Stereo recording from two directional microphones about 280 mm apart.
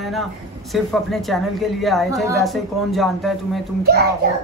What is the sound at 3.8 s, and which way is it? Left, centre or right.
Child singing, right.